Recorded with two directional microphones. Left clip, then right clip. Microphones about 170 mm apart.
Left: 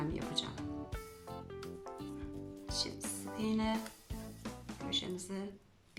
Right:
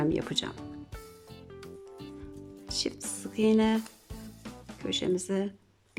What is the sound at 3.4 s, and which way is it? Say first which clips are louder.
Speech: right 12 dB; 60° right (ahead or behind).